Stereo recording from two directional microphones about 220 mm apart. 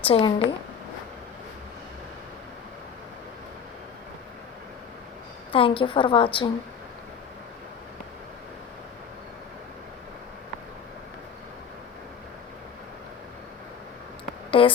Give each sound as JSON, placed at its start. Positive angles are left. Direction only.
{"t": 0.0, "sound": "a woman's voice", "side_deg": 25}
{"t": 5.5, "sound": "a woman's voice", "side_deg": 25}
{"t": 14.5, "sound": "a woman's voice", "side_deg": 25}